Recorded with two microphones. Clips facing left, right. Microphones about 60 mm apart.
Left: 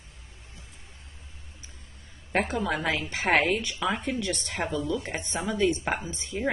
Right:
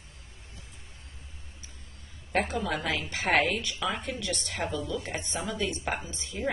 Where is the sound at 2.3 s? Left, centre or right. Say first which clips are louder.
Left 2 dB; left.